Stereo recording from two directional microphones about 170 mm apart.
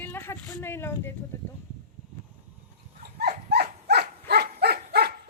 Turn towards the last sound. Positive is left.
turn(degrees=-70)  # may be behind; listen again after turning